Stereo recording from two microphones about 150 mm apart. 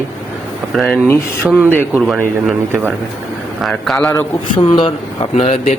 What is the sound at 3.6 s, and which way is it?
Speech, centre (ahead or behind).